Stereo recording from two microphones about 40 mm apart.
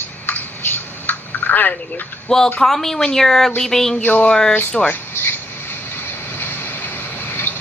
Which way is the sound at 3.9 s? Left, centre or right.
Left.